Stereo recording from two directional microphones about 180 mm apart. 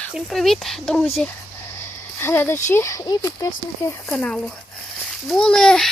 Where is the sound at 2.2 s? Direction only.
15° left (ahead or behind).